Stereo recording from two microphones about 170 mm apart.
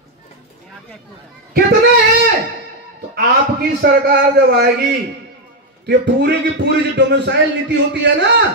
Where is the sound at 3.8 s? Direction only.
75° right (ahead or behind).